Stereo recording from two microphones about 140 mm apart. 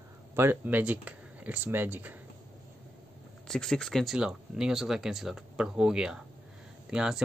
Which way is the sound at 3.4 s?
5° left (ahead or behind).